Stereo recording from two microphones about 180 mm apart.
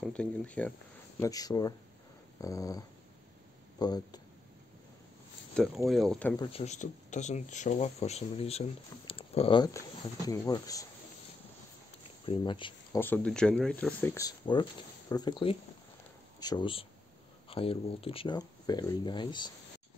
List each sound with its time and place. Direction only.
0.0 s speech: 5° left (ahead or behind)
1.2 s speech: 20° left (ahead or behind)
3.8 s speech: 20° left (ahead or behind)
5.9 s speech: centre (ahead or behind)
6.3 s speech: 25° left (ahead or behind)
6.6 s speech: 40° left (ahead or behind)
9.7 s speech: 15° left (ahead or behind)
12.3 s speech: 25° left (ahead or behind)
13.0 s speech: 10° left (ahead or behind); by 19.5 s 25° left (ahead or behind)